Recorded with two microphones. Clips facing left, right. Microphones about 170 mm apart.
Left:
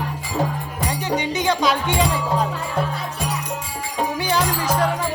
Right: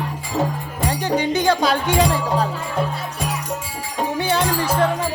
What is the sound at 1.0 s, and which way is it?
Music, 35° right (ahead or behind).